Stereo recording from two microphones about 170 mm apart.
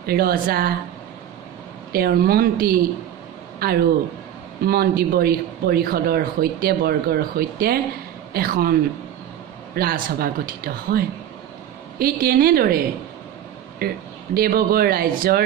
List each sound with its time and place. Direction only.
0.0 s speech: 65° right (ahead or behind)
1.9 s a man's voice: 60° right (ahead or behind)
9.8 s speech: 60° right (ahead or behind)